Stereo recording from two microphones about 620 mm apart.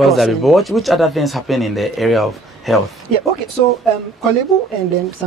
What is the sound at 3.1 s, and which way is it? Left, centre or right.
Speech, right.